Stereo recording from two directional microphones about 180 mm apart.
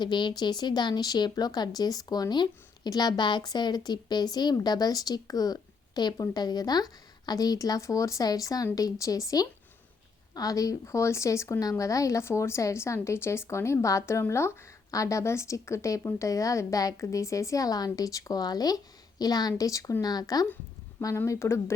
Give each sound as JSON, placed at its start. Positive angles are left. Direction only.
{"t": 0.0, "sound": "speech", "side_deg": 25}